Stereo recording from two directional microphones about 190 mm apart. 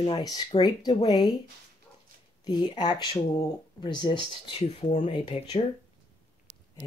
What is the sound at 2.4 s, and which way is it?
Speech, 20° left (ahead or behind).